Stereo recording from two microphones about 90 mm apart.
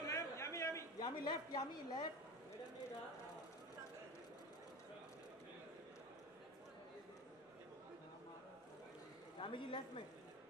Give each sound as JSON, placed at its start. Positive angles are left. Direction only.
{"t": 0.0, "sound": "a sound", "side_deg": 35}
{"t": 0.9, "sound": "a man's voice", "side_deg": 50}
{"t": 9.4, "sound": "a man's voice", "side_deg": 70}